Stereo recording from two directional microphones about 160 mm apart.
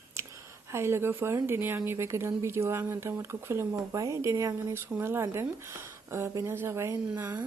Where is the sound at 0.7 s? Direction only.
15° right (ahead or behind).